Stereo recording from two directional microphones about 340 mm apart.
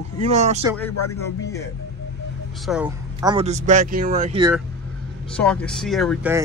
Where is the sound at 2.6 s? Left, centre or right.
Centre.